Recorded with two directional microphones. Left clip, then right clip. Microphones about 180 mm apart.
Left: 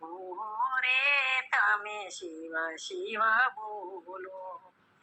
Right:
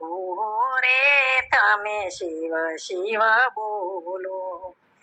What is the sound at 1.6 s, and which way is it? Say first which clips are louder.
Female singing: right 8 dB; 35° right (ahead or behind).